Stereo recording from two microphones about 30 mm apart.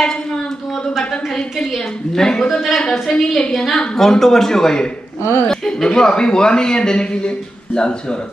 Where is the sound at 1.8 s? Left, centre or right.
Left.